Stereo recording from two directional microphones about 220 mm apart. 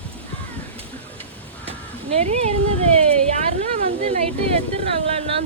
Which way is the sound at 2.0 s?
25° right (ahead or behind).